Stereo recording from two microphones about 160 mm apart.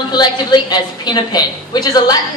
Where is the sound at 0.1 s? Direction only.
25° left (ahead or behind).